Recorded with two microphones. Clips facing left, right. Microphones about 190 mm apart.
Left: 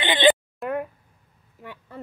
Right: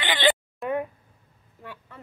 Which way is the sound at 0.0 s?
20° left (ahead or behind).